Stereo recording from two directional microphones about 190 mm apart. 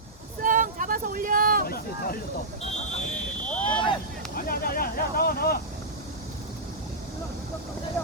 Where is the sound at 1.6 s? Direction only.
50° left (ahead or behind).